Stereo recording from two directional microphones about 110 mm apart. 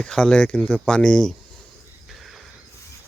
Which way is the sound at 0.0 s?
5° left (ahead or behind).